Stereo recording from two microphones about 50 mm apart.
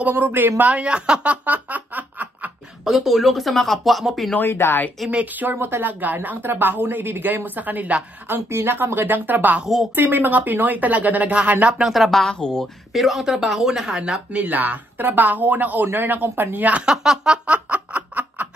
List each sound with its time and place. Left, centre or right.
0.1 s a woman's voice: right
0.6 s a sound: right
2.8 s speech: centre
4.4 s speech: left
5.1 s a woman's voice: right
8.5 s a woman's voice: right
11.8 s speech: centre
12.4 s speech: centre
12.9 s speech: centre
14.3 s a woman's voice: right
16.8 s speech: centre
17.5 s laughter: right